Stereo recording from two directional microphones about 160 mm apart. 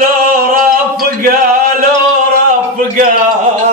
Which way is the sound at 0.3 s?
60° right (ahead or behind).